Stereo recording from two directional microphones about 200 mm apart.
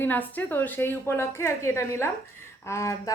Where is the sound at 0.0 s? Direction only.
10° left (ahead or behind).